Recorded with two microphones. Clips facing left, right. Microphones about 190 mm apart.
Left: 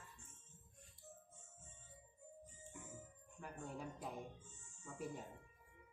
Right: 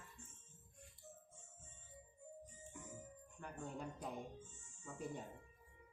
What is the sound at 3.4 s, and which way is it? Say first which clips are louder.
Speech: right 1 dB; 5° left (ahead or behind).